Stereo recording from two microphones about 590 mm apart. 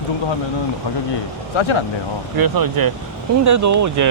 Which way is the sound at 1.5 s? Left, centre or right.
Left.